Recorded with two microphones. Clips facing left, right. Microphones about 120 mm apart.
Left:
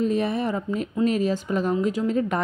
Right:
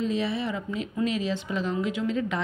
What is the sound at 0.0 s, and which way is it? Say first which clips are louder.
A woman's voice: left 4 dB; 50° left (ahead or behind).